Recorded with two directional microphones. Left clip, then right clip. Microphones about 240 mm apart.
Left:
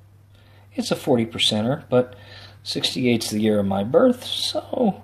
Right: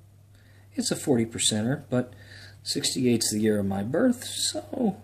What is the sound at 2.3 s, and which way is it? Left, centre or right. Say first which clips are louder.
Speech: left 2 dB; centre.